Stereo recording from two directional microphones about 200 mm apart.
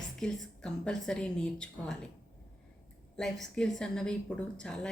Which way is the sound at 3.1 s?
5° left (ahead or behind).